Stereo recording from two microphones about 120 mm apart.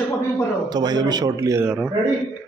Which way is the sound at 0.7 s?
35° right (ahead or behind).